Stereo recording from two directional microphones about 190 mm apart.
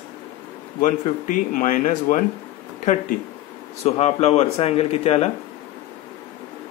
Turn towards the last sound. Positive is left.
turn(degrees=35)  # may be behind; listen again after turning